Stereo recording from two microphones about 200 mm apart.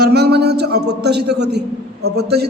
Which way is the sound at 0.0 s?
55° right (ahead or behind).